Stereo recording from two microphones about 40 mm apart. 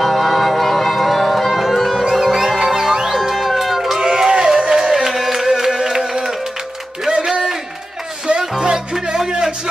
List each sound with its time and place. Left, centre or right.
0.0 s music: centre
1.6 s music: centre
2.0 s music: centre
3.2 s cat: centre
4.0 s a sound: centre
5.0 s music: centre